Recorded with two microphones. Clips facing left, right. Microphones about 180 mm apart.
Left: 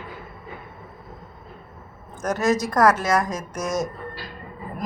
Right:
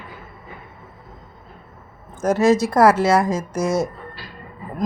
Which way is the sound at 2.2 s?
30° right (ahead or behind).